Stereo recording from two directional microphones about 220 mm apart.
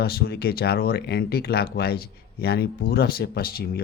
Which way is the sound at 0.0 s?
45° left (ahead or behind).